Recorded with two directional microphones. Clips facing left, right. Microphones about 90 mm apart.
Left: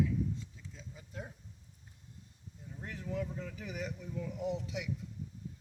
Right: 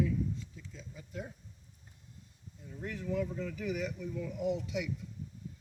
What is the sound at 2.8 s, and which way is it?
Speech, 30° left (ahead or behind).